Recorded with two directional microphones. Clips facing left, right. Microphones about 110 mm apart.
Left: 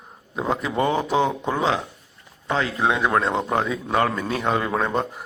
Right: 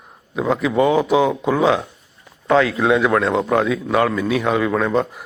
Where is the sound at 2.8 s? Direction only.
5° left (ahead or behind).